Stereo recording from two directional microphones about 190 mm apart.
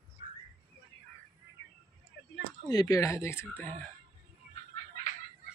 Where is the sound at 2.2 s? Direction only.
60° left (ahead or behind).